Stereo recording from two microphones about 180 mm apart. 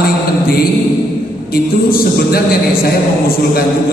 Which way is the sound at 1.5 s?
55° left (ahead or behind).